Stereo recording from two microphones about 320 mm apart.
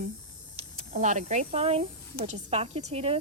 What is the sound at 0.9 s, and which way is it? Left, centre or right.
A woman's voice, right.